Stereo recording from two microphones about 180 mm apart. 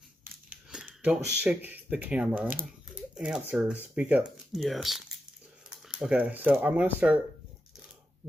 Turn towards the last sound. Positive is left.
turn(degrees=-10)  # may be behind; listen again after turning